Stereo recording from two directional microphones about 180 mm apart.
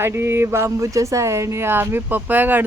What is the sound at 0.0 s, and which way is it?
Speech, 15° right (ahead or behind).